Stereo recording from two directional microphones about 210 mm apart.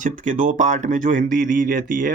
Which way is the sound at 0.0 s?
35° right (ahead or behind).